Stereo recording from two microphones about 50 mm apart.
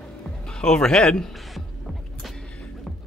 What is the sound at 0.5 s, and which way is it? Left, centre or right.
Speech, centre.